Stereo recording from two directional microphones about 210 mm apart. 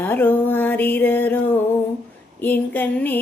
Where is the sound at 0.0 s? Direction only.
10° left (ahead or behind).